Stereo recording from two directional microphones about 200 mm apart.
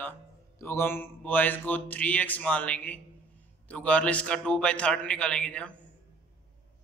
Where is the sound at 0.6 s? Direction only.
10° left (ahead or behind).